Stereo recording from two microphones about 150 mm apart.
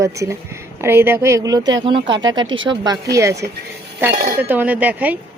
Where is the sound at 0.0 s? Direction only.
20° right (ahead or behind).